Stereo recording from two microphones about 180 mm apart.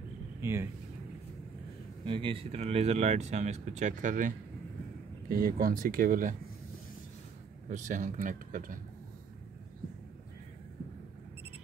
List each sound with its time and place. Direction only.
0.4 s speech: 15° right (ahead or behind)
2.0 s speech: 30° right (ahead or behind); by 4.3 s 45° right (ahead or behind)
5.3 s speech: 55° right (ahead or behind)
7.7 s speech: 45° right (ahead or behind)